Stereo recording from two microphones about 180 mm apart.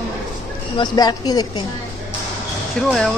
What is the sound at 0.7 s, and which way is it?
Speech, 20° left (ahead or behind).